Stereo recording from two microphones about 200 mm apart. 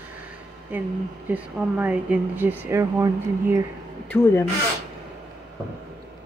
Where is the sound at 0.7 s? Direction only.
10° right (ahead or behind).